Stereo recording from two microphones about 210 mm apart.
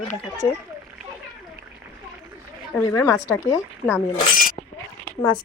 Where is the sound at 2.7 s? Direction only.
15° left (ahead or behind).